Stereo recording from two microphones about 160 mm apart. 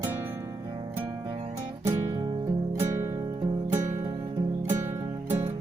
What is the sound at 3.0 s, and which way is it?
Music, 20° right (ahead or behind).